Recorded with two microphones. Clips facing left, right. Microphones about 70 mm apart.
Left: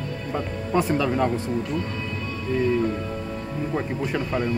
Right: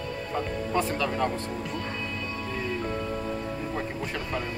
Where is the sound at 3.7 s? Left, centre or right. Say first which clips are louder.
Left 6 dB; centre.